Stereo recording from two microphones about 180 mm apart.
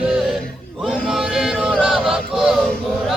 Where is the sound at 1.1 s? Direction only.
Centre (ahead or behind).